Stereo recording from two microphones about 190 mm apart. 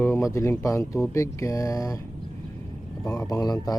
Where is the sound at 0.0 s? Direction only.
15° left (ahead or behind).